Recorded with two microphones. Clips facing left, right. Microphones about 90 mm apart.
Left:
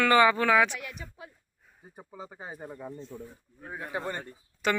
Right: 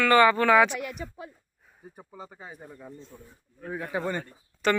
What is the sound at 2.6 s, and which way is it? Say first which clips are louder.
Speech: left 4 dB; 45° left (ahead or behind).